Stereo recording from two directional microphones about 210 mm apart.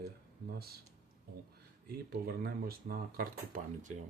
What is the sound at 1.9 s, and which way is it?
Speech, 45° right (ahead or behind).